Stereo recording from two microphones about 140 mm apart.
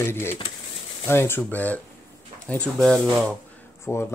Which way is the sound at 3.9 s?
20° left (ahead or behind).